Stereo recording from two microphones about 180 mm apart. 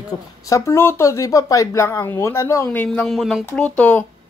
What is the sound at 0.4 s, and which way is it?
Speech, 15° left (ahead or behind).